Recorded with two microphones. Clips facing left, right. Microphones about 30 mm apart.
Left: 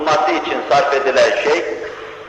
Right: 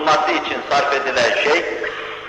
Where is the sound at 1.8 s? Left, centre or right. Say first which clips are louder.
Right 3 dB; right.